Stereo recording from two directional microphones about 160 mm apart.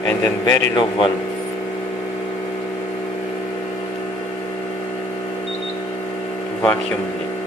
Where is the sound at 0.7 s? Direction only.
30° left (ahead or behind).